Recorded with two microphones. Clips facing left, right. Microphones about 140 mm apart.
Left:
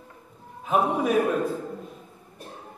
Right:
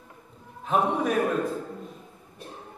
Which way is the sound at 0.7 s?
5° left (ahead or behind).